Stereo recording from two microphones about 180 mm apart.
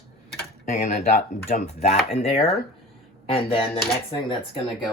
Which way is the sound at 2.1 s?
35° left (ahead or behind).